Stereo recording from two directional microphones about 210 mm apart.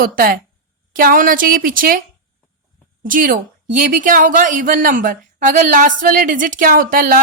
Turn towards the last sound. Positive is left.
turn(degrees=-40)  # may be behind; listen again after turning